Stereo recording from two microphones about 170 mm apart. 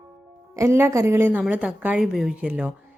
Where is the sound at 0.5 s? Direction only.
15° right (ahead or behind).